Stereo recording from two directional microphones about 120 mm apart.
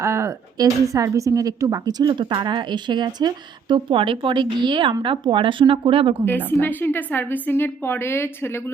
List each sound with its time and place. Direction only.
0.0 s speech: 25° right (ahead or behind); by 6.2 s 50° right (ahead or behind)
6.2 s a woman's voice: 15° left (ahead or behind)